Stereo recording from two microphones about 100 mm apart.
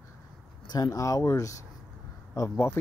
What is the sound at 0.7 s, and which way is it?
Speech, 40° left (ahead or behind).